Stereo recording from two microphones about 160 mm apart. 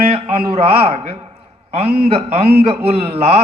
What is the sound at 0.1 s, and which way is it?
A man's voice, 35° right (ahead or behind).